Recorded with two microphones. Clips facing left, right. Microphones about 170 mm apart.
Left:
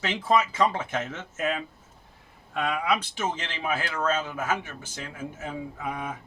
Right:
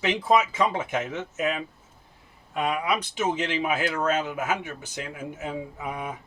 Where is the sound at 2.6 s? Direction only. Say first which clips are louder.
Right 1 dB; 15° right (ahead or behind).